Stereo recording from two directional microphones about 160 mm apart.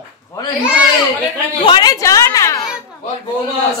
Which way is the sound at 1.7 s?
25° left (ahead or behind).